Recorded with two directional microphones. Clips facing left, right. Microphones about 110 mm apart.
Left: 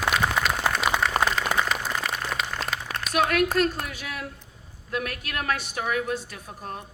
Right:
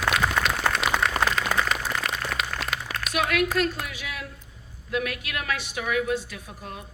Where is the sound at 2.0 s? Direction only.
Centre (ahead or behind).